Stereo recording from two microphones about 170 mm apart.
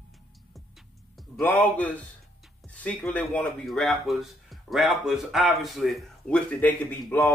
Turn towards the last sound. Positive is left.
turn(degrees=10)  # may be behind; listen again after turning